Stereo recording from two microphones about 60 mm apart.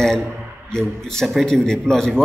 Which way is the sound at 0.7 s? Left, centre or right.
Centre.